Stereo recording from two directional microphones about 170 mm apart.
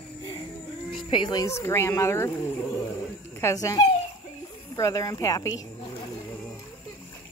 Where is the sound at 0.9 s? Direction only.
30° left (ahead or behind).